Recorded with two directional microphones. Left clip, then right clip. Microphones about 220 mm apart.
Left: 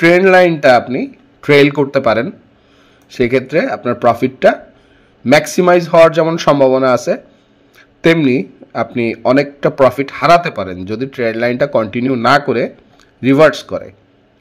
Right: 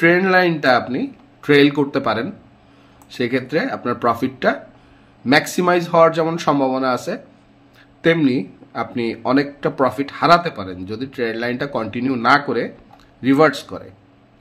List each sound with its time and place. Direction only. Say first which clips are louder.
0.0 s speech: left 6 dB; 25° left (ahead or behind)